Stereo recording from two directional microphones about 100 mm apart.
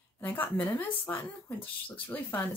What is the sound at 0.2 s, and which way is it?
Speech, 15° left (ahead or behind).